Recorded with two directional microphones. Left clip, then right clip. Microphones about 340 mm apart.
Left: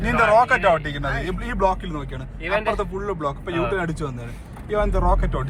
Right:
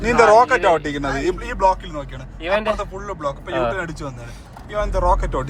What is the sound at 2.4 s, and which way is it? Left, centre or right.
Speech, right.